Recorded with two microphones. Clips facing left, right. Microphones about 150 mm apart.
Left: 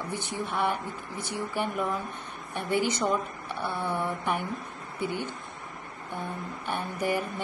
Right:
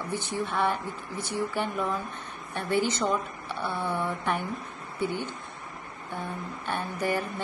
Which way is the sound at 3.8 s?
15° left (ahead or behind).